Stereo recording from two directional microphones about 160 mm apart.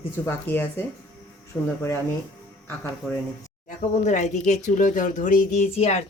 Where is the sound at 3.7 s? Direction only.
50° left (ahead or behind).